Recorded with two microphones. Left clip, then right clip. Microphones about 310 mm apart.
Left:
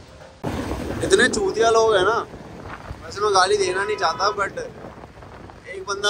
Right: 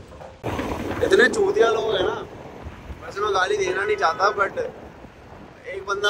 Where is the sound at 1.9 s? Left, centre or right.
Left.